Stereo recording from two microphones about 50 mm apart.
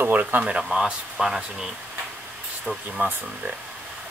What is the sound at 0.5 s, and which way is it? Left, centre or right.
Speech, centre.